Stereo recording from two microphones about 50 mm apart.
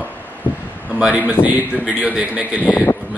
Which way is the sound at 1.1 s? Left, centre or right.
Right.